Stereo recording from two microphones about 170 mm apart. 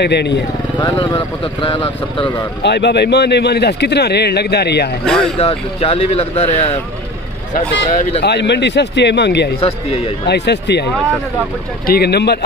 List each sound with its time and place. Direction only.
0.0 s speech: 80° left
0.7 s speech: 30° left (ahead or behind)
2.6 s speech: 90° left; by 4.9 s 75° left (ahead or behind)
5.0 s speech: centre (ahead or behind)
5.4 s speech: 35° left (ahead or behind)
8.2 s a man's voice: 85° left
9.6 s speech: 35° left (ahead or behind)
10.2 s speech: 85° left
11.8 s speech: 65° left (ahead or behind)